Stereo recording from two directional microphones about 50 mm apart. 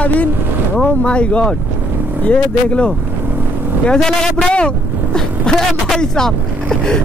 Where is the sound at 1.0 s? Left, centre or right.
Left.